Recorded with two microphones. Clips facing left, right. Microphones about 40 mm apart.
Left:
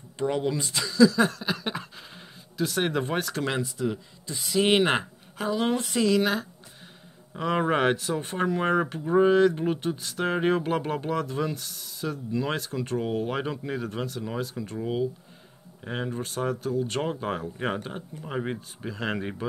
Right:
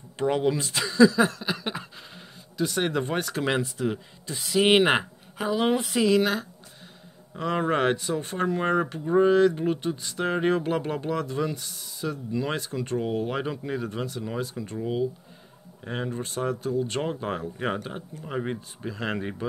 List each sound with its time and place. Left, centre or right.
0.2 s speech: centre
0.8 s a sound: right
1.1 s speech: centre
3.4 s speech: centre
7.3 s speech: centre